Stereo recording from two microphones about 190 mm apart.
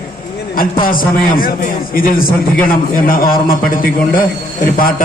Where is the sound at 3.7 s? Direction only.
50° left (ahead or behind).